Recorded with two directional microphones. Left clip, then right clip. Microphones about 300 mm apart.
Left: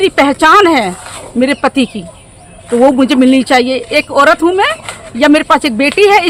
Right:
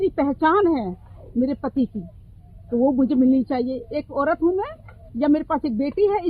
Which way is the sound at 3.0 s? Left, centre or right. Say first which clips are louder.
Left 11 dB; left.